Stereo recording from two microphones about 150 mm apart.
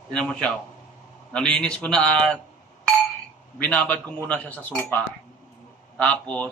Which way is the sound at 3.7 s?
10° left (ahead or behind).